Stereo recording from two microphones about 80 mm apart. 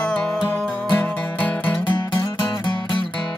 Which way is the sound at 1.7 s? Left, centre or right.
Left.